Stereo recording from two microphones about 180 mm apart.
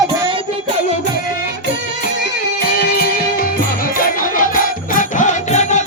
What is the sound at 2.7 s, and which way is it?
Music, 60° left (ahead or behind).